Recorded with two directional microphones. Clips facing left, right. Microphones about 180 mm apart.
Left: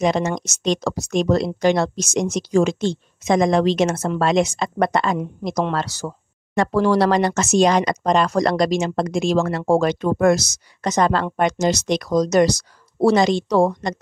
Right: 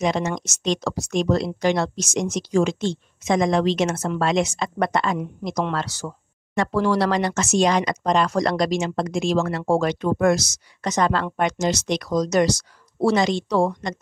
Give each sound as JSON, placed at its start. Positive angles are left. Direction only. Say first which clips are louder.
{"t": 0.0, "sound": "speech", "louder": "left 3 dB", "side_deg": 40}